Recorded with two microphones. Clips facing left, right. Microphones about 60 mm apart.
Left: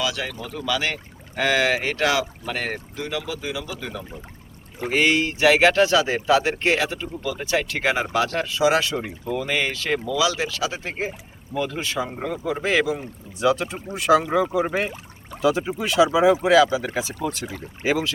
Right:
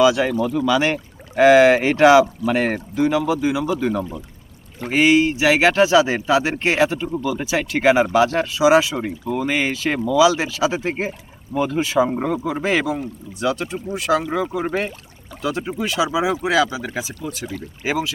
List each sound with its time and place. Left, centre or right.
0.0 s speech: centre
4.9 s speech: centre
12.5 s speech: centre